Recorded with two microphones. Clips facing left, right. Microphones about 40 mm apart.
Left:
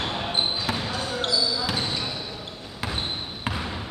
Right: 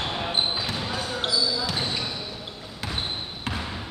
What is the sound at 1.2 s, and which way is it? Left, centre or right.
Basketball bounce, centre.